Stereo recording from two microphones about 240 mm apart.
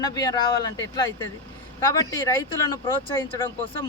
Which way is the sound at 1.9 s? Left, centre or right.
Centre.